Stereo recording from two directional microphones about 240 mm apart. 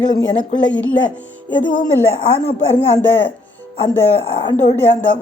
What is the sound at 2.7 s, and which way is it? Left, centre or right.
Speech, left.